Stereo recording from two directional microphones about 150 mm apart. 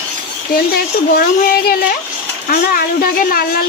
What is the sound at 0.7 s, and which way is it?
A woman's voice, 85° left.